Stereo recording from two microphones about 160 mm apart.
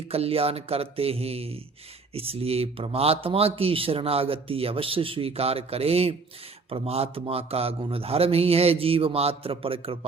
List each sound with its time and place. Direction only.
0.1 s speech: 40° right (ahead or behind)